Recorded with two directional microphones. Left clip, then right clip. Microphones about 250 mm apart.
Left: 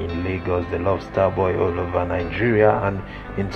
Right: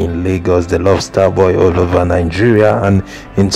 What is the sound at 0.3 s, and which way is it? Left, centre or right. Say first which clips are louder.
Speech: right 11 dB; right.